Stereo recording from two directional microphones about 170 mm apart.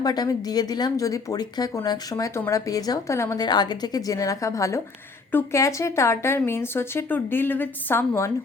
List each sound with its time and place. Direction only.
0.0 s a woman's voice: 25° left (ahead or behind)